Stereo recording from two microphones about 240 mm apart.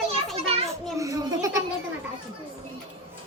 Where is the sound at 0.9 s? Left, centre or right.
Centre.